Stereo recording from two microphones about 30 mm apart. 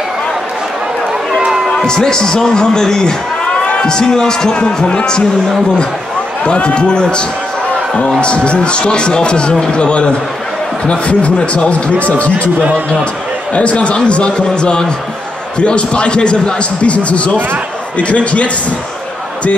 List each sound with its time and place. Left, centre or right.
2.0 s a man's voice: left
3.5 s a man's voice: left
6.4 s speech: left
8.5 s speech: left